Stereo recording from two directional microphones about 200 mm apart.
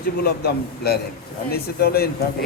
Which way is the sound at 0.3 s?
50° left (ahead or behind).